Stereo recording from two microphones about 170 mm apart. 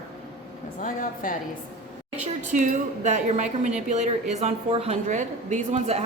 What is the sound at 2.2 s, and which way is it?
A woman's voice, 45° right (ahead or behind).